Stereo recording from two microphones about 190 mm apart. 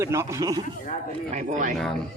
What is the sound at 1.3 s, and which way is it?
Speech, 40° right (ahead or behind).